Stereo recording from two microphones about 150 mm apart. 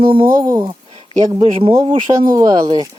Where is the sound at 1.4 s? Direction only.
40° right (ahead or behind).